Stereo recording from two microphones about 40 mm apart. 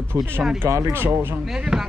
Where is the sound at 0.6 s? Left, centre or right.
Right.